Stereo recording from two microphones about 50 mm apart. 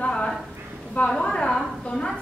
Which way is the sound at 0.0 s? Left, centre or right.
Left.